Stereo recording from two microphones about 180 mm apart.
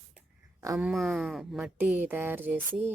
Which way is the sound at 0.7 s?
5° right (ahead or behind).